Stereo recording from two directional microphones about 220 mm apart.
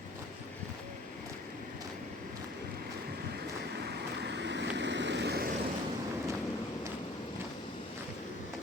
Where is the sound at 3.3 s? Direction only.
50° right (ahead or behind).